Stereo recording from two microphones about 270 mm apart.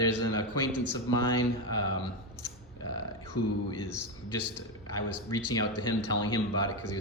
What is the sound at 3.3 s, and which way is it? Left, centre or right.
Speech, left.